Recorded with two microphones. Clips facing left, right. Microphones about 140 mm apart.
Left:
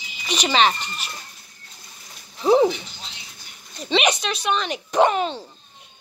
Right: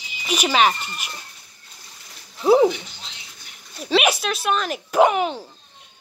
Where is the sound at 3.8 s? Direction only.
5° right (ahead or behind).